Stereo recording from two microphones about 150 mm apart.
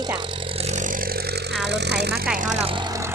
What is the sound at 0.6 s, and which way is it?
Vehicle, 55° right (ahead or behind).